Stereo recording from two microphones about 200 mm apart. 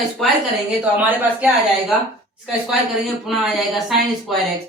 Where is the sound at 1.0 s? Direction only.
10° right (ahead or behind).